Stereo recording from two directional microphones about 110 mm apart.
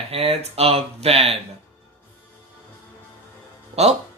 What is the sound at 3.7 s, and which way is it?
Speech, 75° right (ahead or behind).